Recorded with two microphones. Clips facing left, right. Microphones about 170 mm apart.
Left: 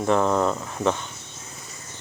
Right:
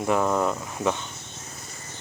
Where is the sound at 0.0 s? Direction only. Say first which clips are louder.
Left 2 dB; 10° right (ahead or behind).